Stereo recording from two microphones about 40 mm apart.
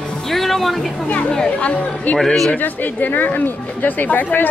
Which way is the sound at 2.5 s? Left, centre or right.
Left.